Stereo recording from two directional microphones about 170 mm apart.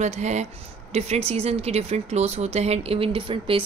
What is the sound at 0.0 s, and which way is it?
Speech, 40° right (ahead or behind).